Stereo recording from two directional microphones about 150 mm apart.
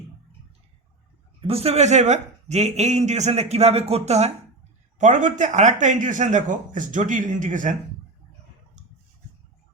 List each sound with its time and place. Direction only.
1.5 s a man's voice: 40° right (ahead or behind); by 7.8 s 60° right (ahead or behind)